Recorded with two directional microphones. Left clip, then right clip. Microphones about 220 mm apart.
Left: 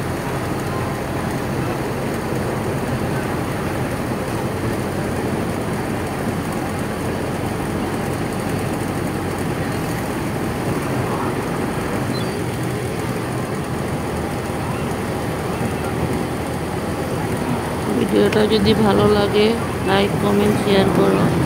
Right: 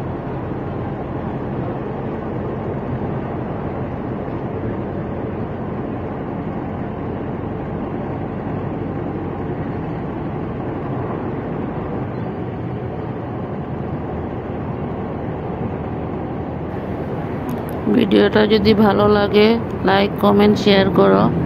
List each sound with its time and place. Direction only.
18.1 s speech: 25° right (ahead or behind)